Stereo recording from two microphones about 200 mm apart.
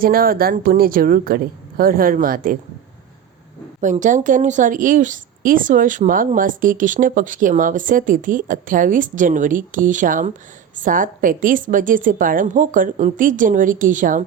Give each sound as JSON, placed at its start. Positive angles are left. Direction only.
{"t": 0.0, "sound": "speech", "side_deg": -45}
{"t": 3.8, "sound": "a woman's voice", "side_deg": -40}